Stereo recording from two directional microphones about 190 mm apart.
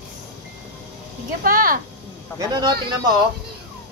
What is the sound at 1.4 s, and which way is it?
Speech, 45° right (ahead or behind).